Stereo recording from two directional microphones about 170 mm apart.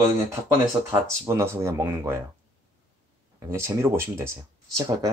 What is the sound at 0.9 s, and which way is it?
Speech, 15° right (ahead or behind).